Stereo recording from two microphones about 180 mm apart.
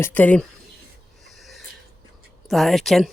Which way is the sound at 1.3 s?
Centre (ahead or behind).